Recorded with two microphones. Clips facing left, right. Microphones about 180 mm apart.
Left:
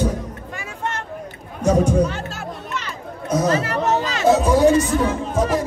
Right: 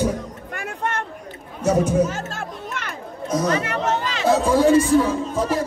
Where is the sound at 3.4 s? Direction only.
35° left (ahead or behind).